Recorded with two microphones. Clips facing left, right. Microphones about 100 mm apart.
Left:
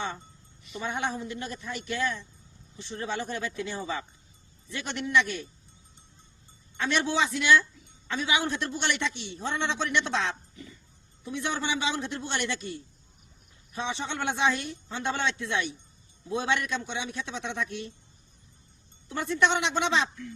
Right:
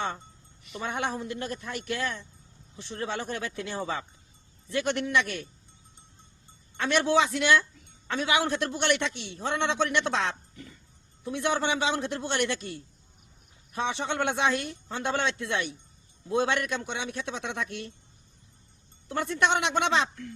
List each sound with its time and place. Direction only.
0.6 s a man's voice: 50° right (ahead or behind)
6.7 s a man's voice: 55° right (ahead or behind)
19.0 s speech: 50° right (ahead or behind)